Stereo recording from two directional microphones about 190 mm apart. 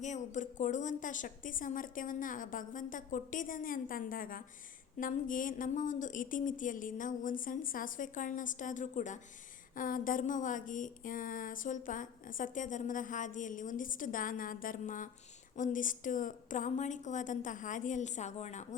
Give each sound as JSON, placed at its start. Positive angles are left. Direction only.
{"t": 0.0, "sound": "a woman's voice", "side_deg": 40}